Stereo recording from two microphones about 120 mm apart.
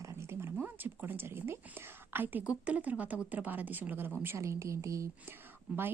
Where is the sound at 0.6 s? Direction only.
15° right (ahead or behind).